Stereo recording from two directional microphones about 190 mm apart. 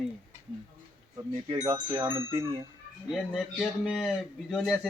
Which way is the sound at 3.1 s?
Centre (ahead or behind).